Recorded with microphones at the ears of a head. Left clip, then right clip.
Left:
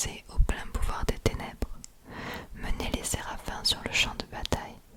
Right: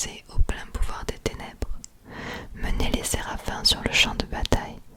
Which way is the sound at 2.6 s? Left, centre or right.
Right.